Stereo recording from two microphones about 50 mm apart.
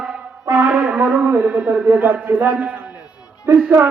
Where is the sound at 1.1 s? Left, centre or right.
Right.